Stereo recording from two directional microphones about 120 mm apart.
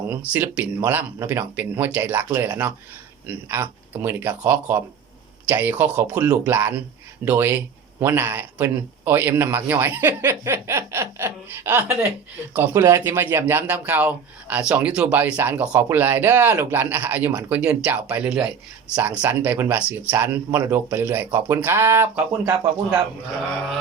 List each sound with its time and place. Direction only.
0.3 s speech: 15° right (ahead or behind)